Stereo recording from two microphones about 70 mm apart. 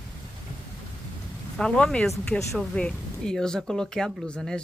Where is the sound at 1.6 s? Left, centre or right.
Centre.